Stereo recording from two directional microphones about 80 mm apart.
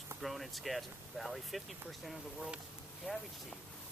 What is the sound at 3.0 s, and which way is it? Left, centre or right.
Speech, centre.